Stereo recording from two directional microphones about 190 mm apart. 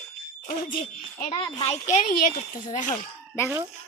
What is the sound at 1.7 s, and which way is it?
Speech, 40° left (ahead or behind).